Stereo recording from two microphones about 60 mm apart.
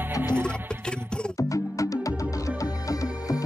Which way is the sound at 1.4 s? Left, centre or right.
Left.